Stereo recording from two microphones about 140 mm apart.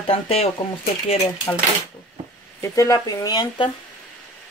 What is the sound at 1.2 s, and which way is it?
Speech, 20° left (ahead or behind).